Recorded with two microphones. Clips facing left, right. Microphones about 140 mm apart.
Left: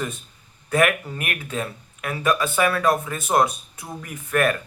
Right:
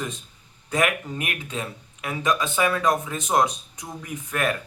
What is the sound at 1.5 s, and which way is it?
Speech, 20° right (ahead or behind).